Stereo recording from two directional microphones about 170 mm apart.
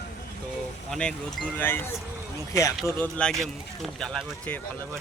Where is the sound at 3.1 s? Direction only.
5° left (ahead or behind).